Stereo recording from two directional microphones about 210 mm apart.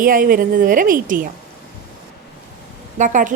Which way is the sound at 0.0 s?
40° right (ahead or behind).